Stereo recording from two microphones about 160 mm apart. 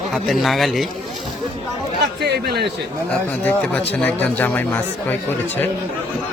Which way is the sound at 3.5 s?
10° left (ahead or behind).